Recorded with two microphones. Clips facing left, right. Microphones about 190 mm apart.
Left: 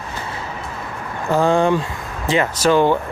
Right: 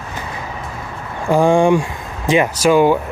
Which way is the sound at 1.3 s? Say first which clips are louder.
Right 3 dB; 15° right (ahead or behind).